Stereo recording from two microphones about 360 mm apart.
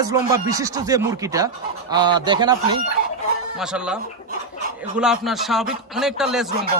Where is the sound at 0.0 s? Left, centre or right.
Centre.